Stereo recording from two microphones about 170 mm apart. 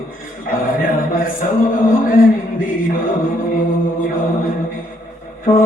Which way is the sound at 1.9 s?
55° left (ahead or behind).